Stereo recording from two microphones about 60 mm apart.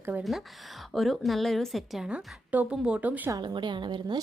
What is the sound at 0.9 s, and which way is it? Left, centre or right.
A woman's voice, centre.